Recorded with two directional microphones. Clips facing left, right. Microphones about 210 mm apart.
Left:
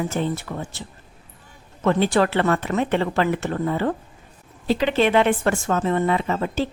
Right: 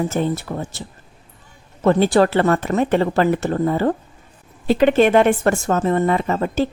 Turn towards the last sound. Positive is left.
turn(degrees=-45)  # may be behind; listen again after turning